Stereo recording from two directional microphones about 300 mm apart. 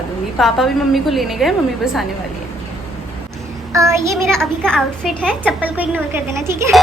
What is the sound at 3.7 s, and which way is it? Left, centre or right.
Speech, centre.